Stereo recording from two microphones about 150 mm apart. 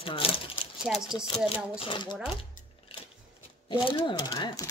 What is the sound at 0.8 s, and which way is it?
Speech, 5° right (ahead or behind).